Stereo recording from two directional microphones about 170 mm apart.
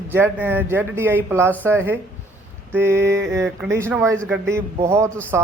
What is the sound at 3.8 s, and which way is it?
Speech, 15° right (ahead or behind).